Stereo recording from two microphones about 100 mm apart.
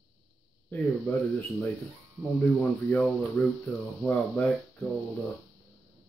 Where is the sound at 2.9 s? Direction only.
15° left (ahead or behind).